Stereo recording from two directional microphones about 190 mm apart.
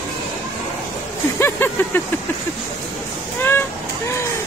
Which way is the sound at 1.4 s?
10° left (ahead or behind).